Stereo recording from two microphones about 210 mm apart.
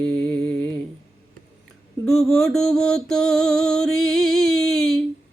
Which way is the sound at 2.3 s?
Centre (ahead or behind).